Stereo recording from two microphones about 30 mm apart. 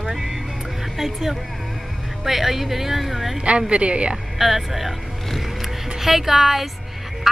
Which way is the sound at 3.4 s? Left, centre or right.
Right.